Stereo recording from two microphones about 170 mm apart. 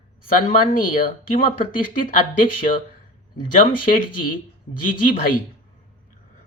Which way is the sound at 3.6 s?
55° left (ahead or behind).